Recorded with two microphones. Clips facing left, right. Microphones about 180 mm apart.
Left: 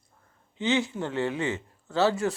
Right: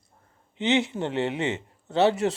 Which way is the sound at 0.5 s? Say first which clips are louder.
Right 2 dB; 20° right (ahead or behind).